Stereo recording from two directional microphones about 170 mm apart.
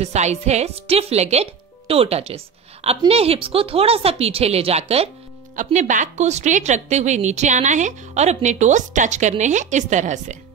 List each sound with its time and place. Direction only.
0.0 s a woman's voice: 40° right (ahead or behind)